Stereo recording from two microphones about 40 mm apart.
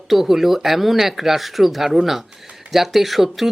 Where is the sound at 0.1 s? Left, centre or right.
Centre.